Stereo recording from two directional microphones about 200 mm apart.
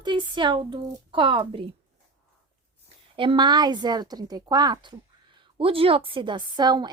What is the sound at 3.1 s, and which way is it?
Speech, 25° right (ahead or behind).